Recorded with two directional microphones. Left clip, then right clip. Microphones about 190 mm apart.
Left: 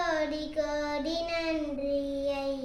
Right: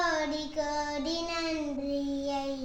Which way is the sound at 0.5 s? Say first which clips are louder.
Left 2 dB; 20° left (ahead or behind).